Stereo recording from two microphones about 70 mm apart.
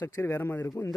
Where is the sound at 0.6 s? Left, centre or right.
Left.